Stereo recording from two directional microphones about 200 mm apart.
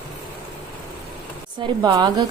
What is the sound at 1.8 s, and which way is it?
Speech, 20° right (ahead or behind).